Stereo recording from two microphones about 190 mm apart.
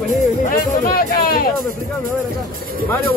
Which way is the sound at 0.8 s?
50° left (ahead or behind).